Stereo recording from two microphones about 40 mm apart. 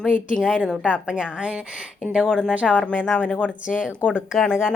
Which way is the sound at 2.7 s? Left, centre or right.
Left.